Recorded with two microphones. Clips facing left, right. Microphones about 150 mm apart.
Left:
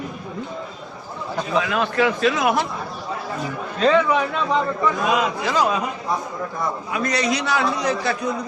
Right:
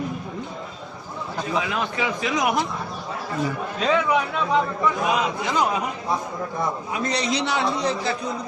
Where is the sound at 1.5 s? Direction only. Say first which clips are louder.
Left 6 dB; 15° right (ahead or behind).